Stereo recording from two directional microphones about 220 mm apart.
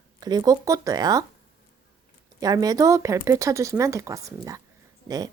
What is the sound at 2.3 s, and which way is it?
Speech, 15° right (ahead or behind).